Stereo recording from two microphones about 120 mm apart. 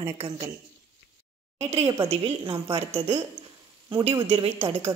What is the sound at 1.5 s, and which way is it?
Speech, 60° right (ahead or behind).